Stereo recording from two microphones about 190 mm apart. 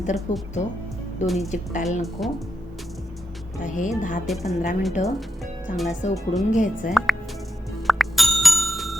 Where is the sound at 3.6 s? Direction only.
40° left (ahead or behind).